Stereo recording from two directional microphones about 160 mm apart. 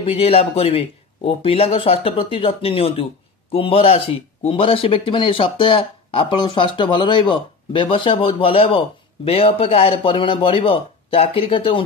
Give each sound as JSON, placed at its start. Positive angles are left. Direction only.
{"t": 0.0, "sound": "speech", "side_deg": 35}